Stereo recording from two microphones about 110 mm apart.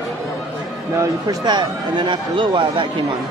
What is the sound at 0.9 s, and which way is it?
A man's voice, 30° right (ahead or behind).